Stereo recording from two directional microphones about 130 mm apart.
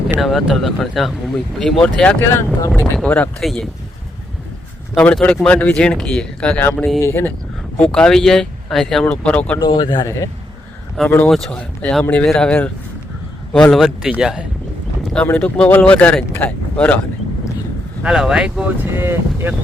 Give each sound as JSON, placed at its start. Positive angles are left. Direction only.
{"t": 0.2, "sound": "speech", "side_deg": 0}
{"t": 2.2, "sound": "speech", "side_deg": 20}
{"t": 4.9, "sound": "speech", "side_deg": 10}
{"t": 7.0, "sound": "speech", "side_deg": 15}
{"t": 7.8, "sound": "speech", "side_deg": 5}
{"t": 9.6, "sound": "speech", "side_deg": 35}
{"t": 11.3, "sound": "speech", "side_deg": 5}
{"t": 15.1, "sound": "speech", "side_deg": 10}
{"t": 18.0, "sound": "speech", "side_deg": -5}
{"t": 18.9, "sound": "speech", "side_deg": -15}